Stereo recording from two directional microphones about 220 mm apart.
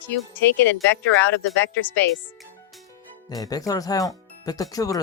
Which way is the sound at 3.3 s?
15° left (ahead or behind).